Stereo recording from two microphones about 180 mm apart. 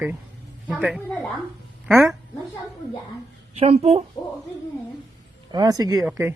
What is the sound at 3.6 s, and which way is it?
Speech, 35° right (ahead or behind).